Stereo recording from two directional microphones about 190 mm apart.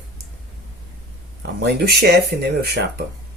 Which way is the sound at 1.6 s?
55° right (ahead or behind).